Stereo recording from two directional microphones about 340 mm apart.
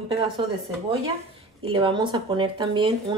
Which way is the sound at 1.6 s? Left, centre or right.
Centre.